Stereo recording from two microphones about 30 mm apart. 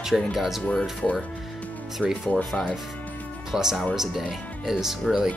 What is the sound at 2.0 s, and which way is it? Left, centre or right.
Speech, right.